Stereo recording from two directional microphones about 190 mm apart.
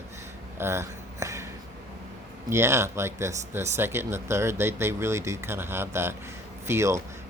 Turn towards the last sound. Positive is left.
turn(degrees=-15)  # may be behind; listen again after turning